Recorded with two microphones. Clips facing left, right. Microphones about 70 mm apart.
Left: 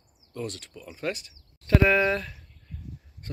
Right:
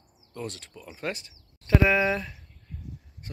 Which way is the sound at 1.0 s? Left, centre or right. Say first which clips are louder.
Left 2 dB; right.